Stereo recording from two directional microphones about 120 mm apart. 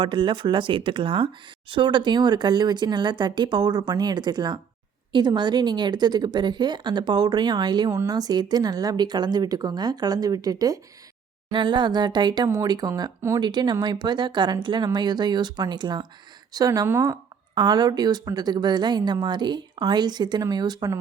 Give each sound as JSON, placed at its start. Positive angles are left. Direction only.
{"t": 0.0, "sound": "speech", "side_deg": -40}
{"t": 17.5, "sound": "speech", "side_deg": -35}